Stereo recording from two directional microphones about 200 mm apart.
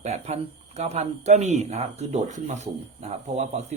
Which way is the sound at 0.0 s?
35° right (ahead or behind).